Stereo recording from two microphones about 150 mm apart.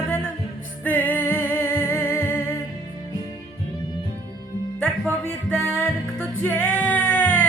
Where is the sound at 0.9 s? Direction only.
10° left (ahead or behind).